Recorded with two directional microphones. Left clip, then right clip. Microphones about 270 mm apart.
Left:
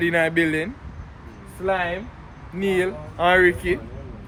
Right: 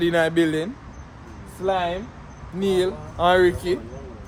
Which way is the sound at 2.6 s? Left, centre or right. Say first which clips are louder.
Right 1 dB; centre.